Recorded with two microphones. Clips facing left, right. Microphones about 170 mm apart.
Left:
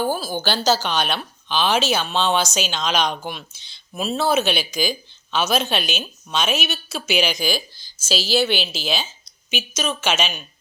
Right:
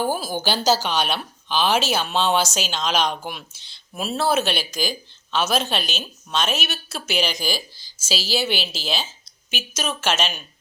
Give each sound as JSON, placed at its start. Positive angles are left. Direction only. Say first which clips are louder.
{"t": 0.0, "sound": "a woman's voice", "louder": "left 1 dB", "side_deg": -10}